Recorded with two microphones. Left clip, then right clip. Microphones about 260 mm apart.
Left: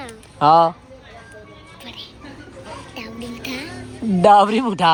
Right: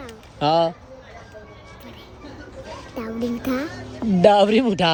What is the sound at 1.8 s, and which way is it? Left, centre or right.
Music, right.